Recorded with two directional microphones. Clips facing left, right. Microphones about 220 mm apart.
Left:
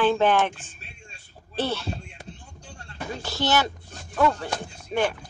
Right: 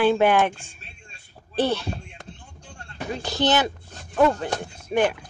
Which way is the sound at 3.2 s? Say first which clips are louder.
Right 3 dB; 20° right (ahead or behind).